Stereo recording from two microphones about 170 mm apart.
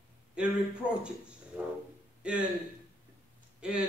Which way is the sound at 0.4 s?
5° right (ahead or behind).